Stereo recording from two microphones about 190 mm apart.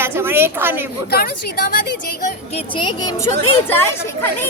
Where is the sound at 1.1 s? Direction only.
50° left (ahead or behind).